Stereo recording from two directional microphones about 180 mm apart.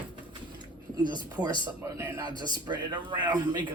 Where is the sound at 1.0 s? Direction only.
25° right (ahead or behind).